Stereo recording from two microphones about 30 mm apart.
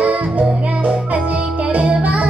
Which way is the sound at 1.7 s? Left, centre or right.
Right.